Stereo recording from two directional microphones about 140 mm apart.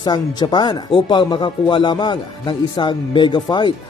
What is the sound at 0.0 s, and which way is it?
Speech, 30° left (ahead or behind).